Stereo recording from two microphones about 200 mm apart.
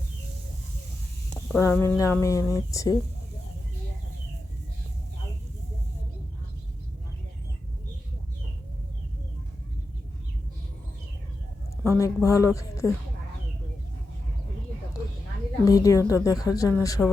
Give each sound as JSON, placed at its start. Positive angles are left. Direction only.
{"t": 1.3, "sound": "speech", "side_deg": 10}
{"t": 11.8, "sound": "speech", "side_deg": 15}
{"t": 15.6, "sound": "speech", "side_deg": 15}